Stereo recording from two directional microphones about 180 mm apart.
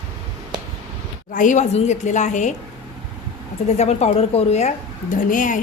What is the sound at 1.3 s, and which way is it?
Speech, 45° left (ahead or behind).